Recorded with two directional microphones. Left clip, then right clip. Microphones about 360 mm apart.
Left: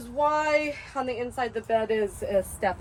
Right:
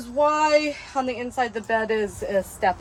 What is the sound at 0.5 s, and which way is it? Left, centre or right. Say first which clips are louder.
Speech: right 5 dB; right.